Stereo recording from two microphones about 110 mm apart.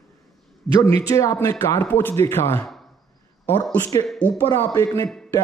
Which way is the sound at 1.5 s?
20° left (ahead or behind).